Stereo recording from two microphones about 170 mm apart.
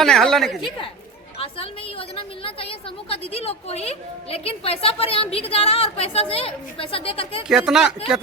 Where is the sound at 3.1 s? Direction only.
35° left (ahead or behind).